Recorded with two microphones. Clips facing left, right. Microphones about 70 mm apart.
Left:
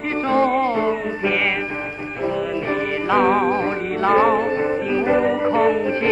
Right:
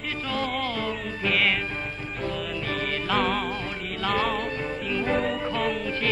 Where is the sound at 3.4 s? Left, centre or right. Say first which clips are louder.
Left 11 dB; left.